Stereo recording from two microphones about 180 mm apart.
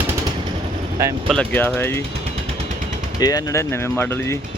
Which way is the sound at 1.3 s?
5° left (ahead or behind).